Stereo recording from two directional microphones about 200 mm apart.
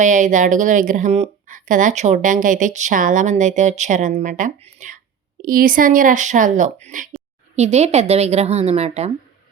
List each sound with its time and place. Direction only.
0.0 s speech: 40° right (ahead or behind)